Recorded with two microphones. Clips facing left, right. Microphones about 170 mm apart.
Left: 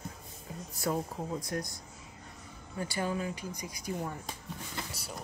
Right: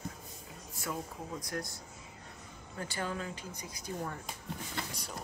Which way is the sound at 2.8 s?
15° left (ahead or behind).